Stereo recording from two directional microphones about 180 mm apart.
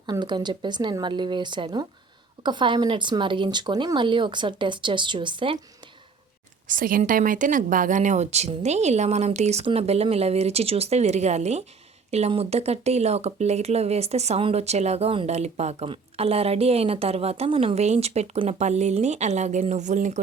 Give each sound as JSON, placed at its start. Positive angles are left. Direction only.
{"t": 0.0, "sound": "speech", "side_deg": -25}
{"t": 6.7, "sound": "speech", "side_deg": -50}